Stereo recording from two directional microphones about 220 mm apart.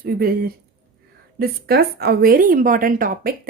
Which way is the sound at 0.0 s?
45° right (ahead or behind).